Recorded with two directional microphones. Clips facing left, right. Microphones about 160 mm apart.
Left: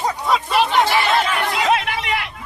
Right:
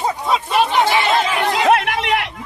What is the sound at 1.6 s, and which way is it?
Chatter, 55° right (ahead or behind).